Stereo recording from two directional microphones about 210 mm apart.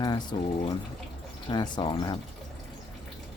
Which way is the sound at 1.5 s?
20° left (ahead or behind).